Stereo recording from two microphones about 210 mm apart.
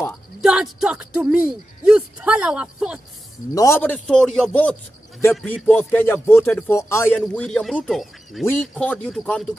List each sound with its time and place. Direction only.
0.4 s speech: 5° right (ahead or behind)
3.5 s speech: 15° left (ahead or behind)